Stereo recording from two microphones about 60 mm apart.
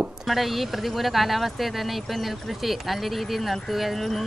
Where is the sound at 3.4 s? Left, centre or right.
Centre.